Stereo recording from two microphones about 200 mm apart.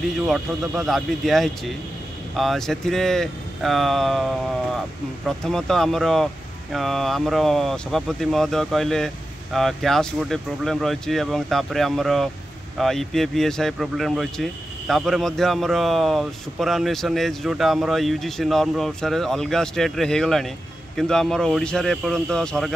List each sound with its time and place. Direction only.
0.3 s speech: centre (ahead or behind)
5.4 s speech: centre (ahead or behind)